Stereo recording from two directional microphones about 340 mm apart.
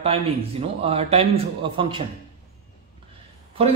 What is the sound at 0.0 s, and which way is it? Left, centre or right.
Speech, centre.